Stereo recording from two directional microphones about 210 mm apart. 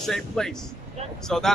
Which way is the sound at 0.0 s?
Centre (ahead or behind).